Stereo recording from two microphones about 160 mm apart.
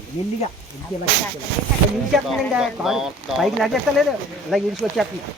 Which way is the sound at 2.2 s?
5° right (ahead or behind).